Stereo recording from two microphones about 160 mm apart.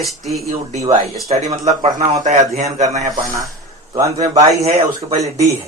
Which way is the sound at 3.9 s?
20° right (ahead or behind).